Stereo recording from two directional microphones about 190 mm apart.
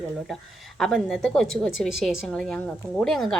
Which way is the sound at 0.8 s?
Centre (ahead or behind).